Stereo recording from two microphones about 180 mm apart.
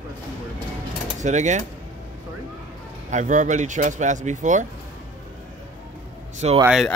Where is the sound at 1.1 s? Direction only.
40° right (ahead or behind).